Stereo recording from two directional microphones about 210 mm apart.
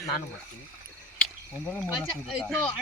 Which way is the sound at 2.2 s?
Centre (ahead or behind).